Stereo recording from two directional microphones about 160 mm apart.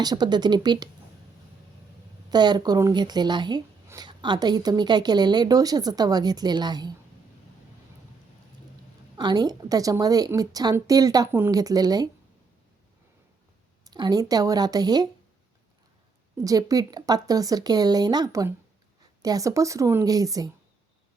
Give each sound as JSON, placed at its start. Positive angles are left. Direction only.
{"t": 0.0, "sound": "speech", "side_deg": -25}
{"t": 2.3, "sound": "speech", "side_deg": -25}
{"t": 9.1, "sound": "speech", "side_deg": -25}
{"t": 13.8, "sound": "speech", "side_deg": -25}
{"t": 16.4, "sound": "speech", "side_deg": -20}